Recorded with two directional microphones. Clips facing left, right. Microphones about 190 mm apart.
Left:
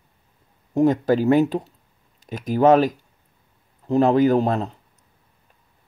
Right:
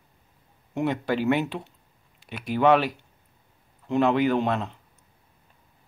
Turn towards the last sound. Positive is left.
turn(degrees=40)  # may be behind; listen again after turning